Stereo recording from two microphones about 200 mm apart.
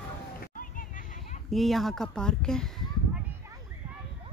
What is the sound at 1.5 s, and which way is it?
Speech, centre (ahead or behind).